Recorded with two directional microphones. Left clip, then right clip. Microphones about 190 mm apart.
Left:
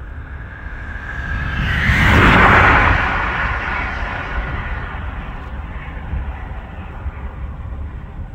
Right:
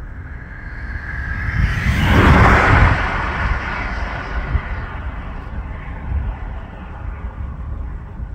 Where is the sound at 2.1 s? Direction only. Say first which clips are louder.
Left 1 dB; 5° left (ahead or behind).